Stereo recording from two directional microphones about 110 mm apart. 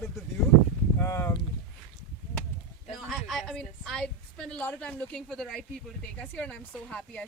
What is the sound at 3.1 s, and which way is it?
A woman's voice, centre (ahead or behind).